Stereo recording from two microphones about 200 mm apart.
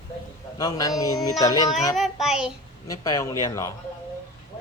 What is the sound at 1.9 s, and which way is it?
Child singing, centre (ahead or behind).